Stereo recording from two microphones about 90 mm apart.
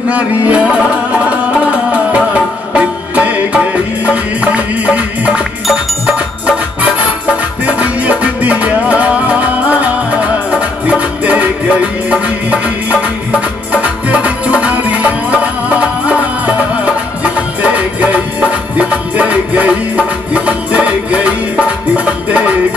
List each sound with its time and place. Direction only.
0.1 s music: 15° right (ahead or behind)
13.7 s music: 15° right (ahead or behind)